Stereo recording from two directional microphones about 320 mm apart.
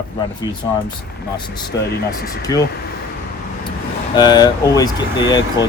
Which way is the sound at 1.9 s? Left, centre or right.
Left.